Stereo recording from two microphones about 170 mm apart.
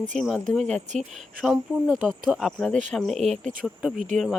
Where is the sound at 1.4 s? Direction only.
Centre (ahead or behind).